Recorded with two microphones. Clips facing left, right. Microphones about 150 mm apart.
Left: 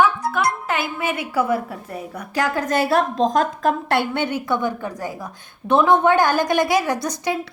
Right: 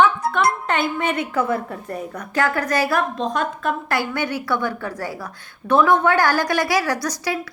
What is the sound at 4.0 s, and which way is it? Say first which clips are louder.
A woman's voice: left 1 dB; 25° left (ahead or behind).